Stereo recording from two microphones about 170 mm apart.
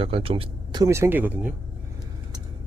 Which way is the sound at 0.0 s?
35° right (ahead or behind).